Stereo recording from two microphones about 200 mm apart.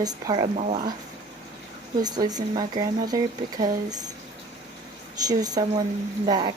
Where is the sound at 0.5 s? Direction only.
35° right (ahead or behind).